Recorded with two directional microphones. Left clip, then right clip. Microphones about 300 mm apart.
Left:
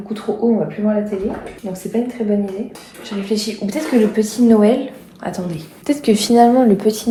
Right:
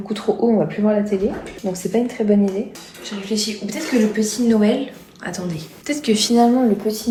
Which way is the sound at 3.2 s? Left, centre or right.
Centre.